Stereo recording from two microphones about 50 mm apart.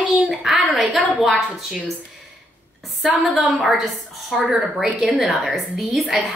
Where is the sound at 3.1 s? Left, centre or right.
Right.